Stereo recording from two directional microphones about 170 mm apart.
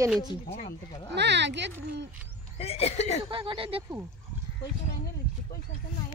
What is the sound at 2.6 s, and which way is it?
Speech, 35° left (ahead or behind).